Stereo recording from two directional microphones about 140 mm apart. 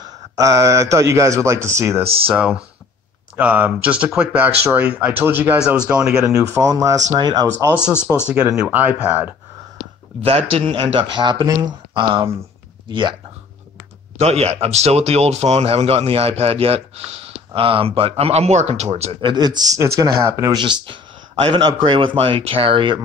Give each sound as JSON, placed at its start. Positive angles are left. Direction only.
{"t": 0.0, "sound": "a man's voice", "side_deg": -20}
{"t": 2.2, "sound": "speech", "side_deg": -10}
{"t": 6.5, "sound": "a man's voice", "side_deg": -20}
{"t": 8.3, "sound": "speech", "side_deg": -10}
{"t": 10.2, "sound": "speech", "side_deg": -45}
{"t": 14.1, "sound": "speech", "side_deg": -50}
{"t": 19.3, "sound": "a man's voice", "side_deg": -30}
{"t": 20.5, "sound": "speech", "side_deg": -35}